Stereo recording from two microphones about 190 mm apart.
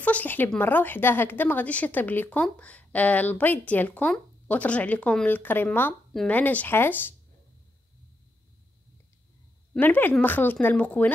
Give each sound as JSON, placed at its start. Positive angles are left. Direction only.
{"t": 0.0, "sound": "a woman's voice", "side_deg": 10}
{"t": 9.8, "sound": "a woman's voice", "side_deg": 10}